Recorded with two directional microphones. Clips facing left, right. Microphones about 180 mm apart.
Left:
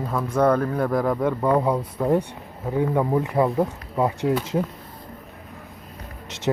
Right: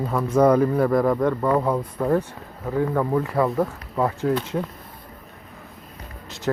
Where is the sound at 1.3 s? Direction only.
10° left (ahead or behind).